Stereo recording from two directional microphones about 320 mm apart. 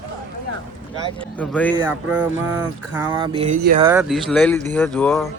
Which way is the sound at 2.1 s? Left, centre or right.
Centre.